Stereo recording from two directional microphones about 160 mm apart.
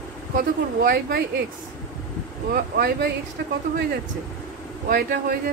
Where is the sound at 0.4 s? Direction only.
70° right (ahead or behind).